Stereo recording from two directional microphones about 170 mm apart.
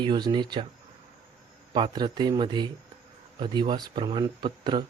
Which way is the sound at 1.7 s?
30° right (ahead or behind).